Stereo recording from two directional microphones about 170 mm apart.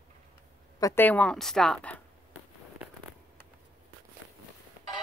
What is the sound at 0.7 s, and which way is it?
A woman's voice, 15° left (ahead or behind).